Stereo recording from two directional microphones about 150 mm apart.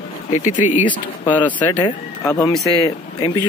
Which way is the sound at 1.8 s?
30° left (ahead or behind).